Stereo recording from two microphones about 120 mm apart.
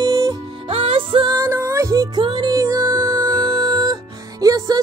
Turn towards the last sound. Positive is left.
turn(degrees=-30)  # may be behind; listen again after turning